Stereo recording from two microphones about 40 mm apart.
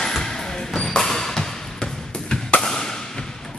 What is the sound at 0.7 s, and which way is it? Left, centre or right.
Music, centre.